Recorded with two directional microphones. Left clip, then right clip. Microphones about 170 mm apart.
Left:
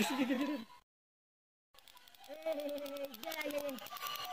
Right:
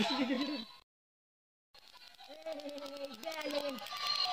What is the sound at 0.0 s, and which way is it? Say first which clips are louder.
Speech: right 1 dB; 5° left (ahead or behind).